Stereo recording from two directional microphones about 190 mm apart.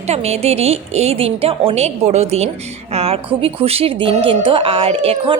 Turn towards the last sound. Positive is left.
turn(degrees=-30)  # may be behind; listen again after turning